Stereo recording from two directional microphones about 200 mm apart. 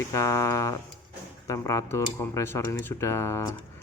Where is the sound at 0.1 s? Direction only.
15° left (ahead or behind).